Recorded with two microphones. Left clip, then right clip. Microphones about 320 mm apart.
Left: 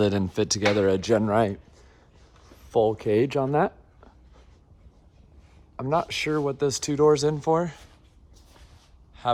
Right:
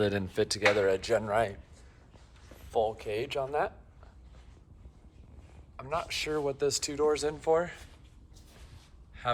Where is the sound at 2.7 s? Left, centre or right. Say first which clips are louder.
Left 9 dB; left.